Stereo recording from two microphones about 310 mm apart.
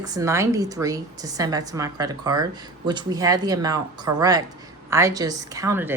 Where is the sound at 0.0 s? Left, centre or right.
Centre.